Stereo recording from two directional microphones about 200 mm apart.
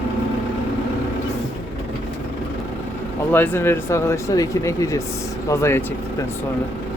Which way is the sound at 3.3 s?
10° left (ahead or behind).